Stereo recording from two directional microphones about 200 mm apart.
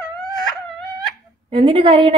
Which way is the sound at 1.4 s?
25° right (ahead or behind).